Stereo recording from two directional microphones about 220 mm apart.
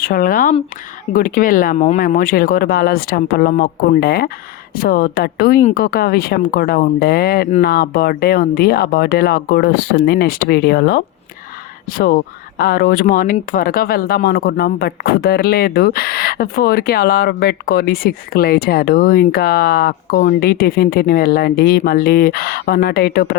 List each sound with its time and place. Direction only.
0.0 s speech: 40° left (ahead or behind)